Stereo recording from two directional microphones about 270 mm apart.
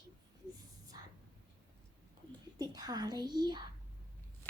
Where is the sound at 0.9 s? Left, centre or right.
Centre.